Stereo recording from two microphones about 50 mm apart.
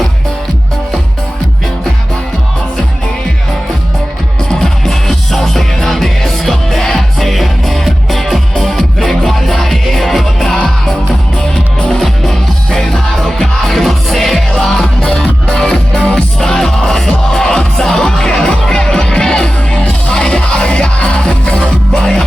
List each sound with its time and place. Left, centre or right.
4.4 s music: centre
21.9 s music: centre